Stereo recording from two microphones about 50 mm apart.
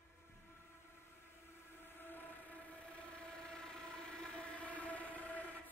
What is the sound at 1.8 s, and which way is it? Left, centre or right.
Train, left.